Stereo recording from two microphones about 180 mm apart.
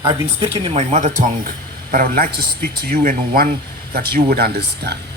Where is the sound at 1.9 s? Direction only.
50° right (ahead or behind).